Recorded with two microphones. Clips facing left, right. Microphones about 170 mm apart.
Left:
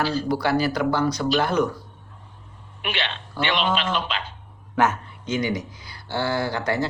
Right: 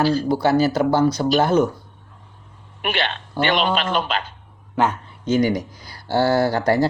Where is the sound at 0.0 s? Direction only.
40° right (ahead or behind).